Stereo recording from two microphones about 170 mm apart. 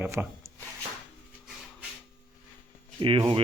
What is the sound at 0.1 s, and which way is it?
Speech, 15° right (ahead or behind).